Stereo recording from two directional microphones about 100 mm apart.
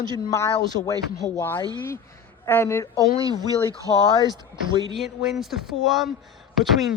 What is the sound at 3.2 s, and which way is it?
Speech, 40° right (ahead or behind).